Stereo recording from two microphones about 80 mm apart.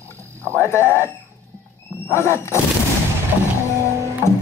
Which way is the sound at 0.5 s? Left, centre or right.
Left.